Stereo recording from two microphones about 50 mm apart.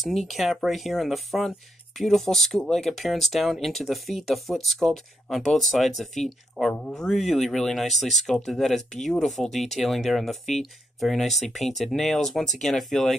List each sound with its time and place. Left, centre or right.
0.0 s speech: centre
6.6 s speech: centre
6.9 s speech: centre